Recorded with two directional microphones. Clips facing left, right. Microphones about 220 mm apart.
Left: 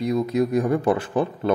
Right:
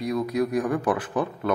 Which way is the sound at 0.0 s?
25° left (ahead or behind).